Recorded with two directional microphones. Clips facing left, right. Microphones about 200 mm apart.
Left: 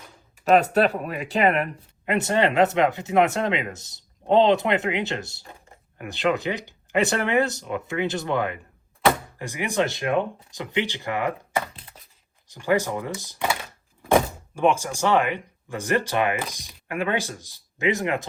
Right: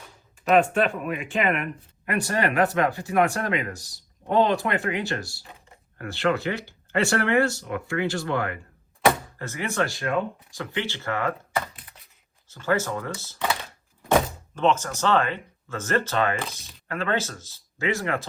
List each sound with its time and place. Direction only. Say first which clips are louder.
0.5 s speech: left 2 dB; 40° left (ahead or behind)
2.0 s speech: left 3 dB; 25° left (ahead or behind)
11.8 s a sound: left 3 dB; 30° left (ahead or behind)
12.5 s speech: left 2 dB; 15° left (ahead or behind)